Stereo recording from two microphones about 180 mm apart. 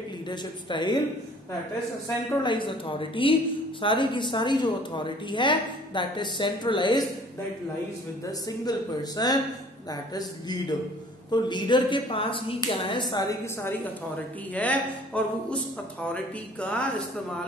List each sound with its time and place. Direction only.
0.3 s a woman's voice: 25° left (ahead or behind)
2.4 s a woman's voice: 25° left (ahead or behind)
8.3 s a woman's voice: 20° left (ahead or behind)